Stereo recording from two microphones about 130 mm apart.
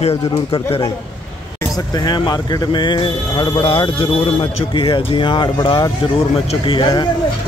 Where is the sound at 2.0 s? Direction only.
30° left (ahead or behind).